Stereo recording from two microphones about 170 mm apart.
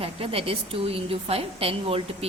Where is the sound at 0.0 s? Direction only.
35° right (ahead or behind).